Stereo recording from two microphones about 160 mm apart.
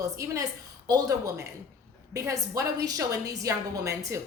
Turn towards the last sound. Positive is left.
turn(degrees=-20)  # may be behind; listen again after turning